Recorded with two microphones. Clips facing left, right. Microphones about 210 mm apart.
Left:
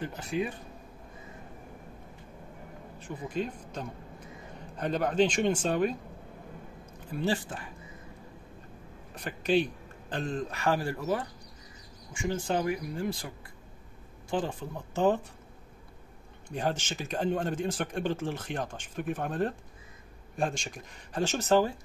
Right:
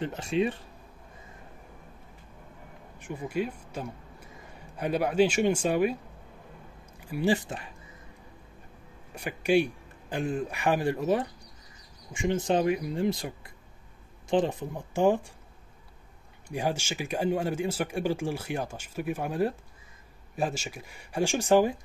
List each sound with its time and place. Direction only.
0.3 s speech: 25° right (ahead or behind)
3.0 s speech: 10° right (ahead or behind)
7.0 s speech: 10° right (ahead or behind)
7.4 s speech: 20° right (ahead or behind)
9.1 s a man's voice: 10° right (ahead or behind)
14.3 s speech: 20° right (ahead or behind)
16.4 s speech: 10° right (ahead or behind)